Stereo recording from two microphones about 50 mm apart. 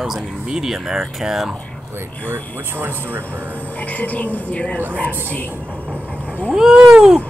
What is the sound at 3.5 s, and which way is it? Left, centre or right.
Speech, left.